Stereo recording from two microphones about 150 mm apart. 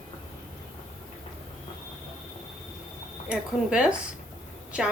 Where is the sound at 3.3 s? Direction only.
5° right (ahead or behind).